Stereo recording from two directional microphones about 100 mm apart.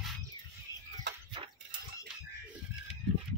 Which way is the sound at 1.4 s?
65° right (ahead or behind).